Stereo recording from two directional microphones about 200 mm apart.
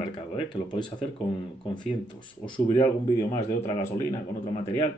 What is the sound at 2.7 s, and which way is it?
Speech, 15° left (ahead or behind).